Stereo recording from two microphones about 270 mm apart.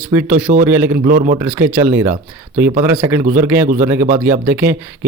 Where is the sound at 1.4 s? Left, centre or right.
Centre.